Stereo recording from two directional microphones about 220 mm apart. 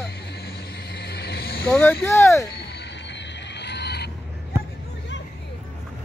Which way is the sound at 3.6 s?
50° left (ahead or behind).